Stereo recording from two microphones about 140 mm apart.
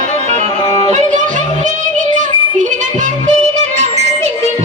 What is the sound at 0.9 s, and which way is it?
Music, 60° right (ahead or behind).